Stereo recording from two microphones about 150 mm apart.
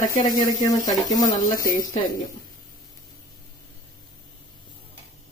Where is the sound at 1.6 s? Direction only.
70° left (ahead or behind).